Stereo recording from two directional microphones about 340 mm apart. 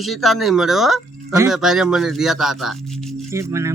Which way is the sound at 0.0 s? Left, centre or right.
Centre.